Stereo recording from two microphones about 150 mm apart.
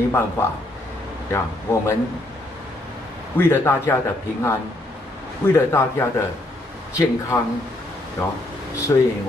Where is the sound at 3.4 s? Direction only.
15° left (ahead or behind).